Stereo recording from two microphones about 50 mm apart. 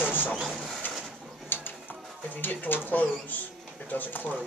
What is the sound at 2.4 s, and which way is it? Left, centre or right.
Speech, left.